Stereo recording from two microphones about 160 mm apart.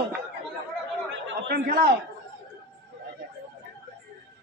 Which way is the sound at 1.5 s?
60° right (ahead or behind).